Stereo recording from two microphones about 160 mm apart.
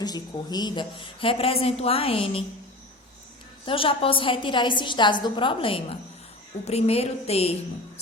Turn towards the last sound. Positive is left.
turn(degrees=40)  # may be behind; listen again after turning